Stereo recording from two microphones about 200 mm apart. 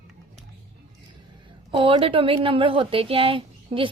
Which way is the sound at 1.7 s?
25° right (ahead or behind).